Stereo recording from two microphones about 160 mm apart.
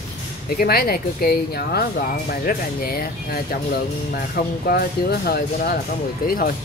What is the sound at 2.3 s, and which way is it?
Speech, 65° left (ahead or behind).